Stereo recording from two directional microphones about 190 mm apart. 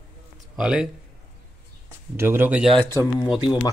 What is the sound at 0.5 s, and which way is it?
Speech, 5° right (ahead or behind).